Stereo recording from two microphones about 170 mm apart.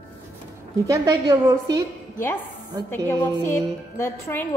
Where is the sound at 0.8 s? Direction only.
20° right (ahead or behind).